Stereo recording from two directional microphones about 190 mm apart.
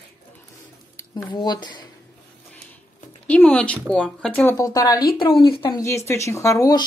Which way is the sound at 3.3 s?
5° left (ahead or behind).